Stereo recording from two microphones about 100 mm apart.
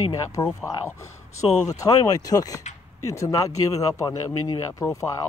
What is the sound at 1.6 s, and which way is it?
Speech, 35° left (ahead or behind).